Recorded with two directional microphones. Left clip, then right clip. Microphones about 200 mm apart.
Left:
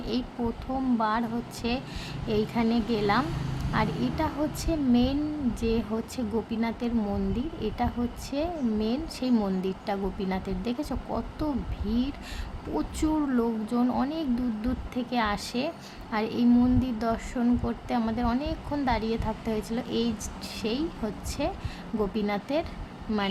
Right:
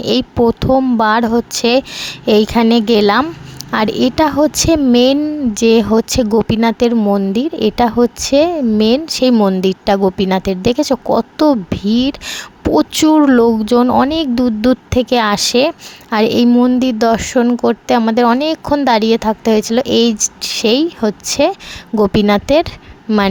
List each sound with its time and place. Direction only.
0.0 s speech: 45° right (ahead or behind)
23.1 s a woman's voice: 35° right (ahead or behind)